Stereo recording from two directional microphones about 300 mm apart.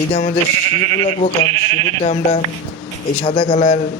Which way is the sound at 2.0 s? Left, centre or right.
Left.